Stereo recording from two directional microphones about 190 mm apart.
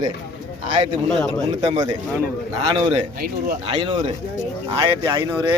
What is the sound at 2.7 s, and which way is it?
A man's voice, 25° right (ahead or behind).